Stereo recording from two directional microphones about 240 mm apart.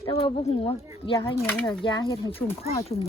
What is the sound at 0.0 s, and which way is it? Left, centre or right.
Speech, left.